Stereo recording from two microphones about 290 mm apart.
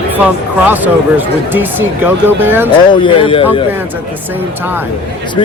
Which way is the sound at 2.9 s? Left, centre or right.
Centre.